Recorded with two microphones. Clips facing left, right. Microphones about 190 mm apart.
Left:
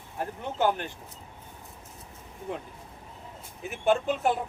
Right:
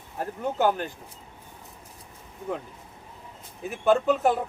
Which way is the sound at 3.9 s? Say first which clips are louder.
Right 4 dB; 40° right (ahead or behind).